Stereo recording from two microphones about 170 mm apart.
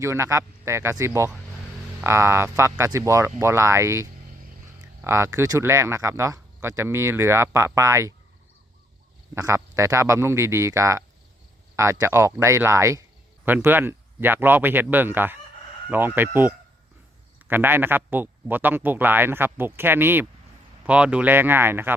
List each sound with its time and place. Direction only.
0.0 s speech: 15° right (ahead or behind)
9.3 s speech: 15° right (ahead or behind)
17.5 s speech: 10° right (ahead or behind)